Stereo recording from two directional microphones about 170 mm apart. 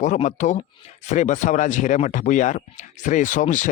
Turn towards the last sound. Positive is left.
turn(degrees=50)  # may be behind; listen again after turning